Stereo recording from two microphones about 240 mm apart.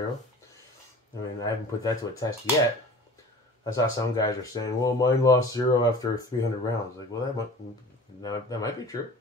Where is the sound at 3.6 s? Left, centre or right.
Centre.